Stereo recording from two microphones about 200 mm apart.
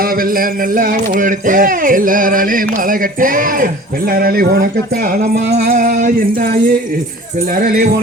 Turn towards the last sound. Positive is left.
turn(degrees=-45)  # may be behind; listen again after turning